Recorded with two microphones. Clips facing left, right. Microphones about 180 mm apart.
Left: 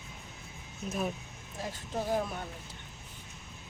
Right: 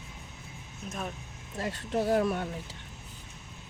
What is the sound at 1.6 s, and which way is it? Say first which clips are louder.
Speech: right 6 dB; 70° right (ahead or behind).